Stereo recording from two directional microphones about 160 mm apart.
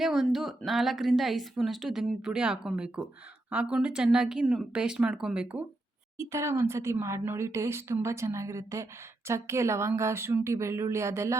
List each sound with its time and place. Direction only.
0.0 s a woman's voice: centre (ahead or behind); by 11.3 s 15° right (ahead or behind)